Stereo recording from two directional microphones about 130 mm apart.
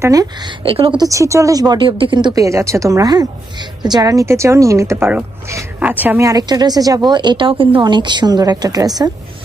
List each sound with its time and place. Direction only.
0.0 s speech: 25° right (ahead or behind)
0.7 s a woman's voice: 45° right (ahead or behind)
1.0 s speech: 25° right (ahead or behind)
6.2 s speech: 30° right (ahead or behind)